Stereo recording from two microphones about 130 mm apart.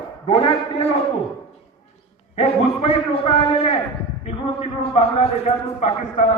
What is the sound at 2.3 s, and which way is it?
A man's voice, 50° left (ahead or behind).